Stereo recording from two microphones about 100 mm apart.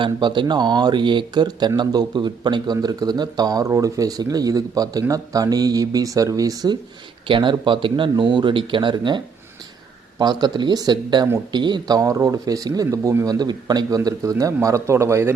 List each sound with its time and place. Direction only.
0.0 s speech: 50° right (ahead or behind); by 6.7 s 35° right (ahead or behind)
7.3 s a man's voice: 55° right (ahead or behind)
8.1 s speech: 45° right (ahead or behind); by 15.3 s 25° right (ahead or behind)